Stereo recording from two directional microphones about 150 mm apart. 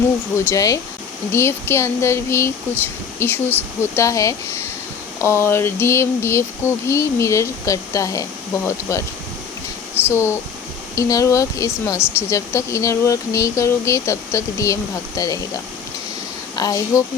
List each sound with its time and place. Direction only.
0.3 s speech: 20° left (ahead or behind)
10.1 s speech: 15° left (ahead or behind)
16.6 s speech: 25° left (ahead or behind)